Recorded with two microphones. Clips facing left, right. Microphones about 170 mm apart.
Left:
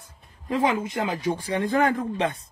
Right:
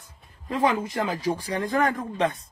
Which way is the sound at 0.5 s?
20° left (ahead or behind).